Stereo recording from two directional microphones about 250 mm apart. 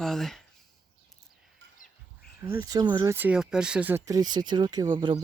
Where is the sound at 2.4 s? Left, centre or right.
Centre.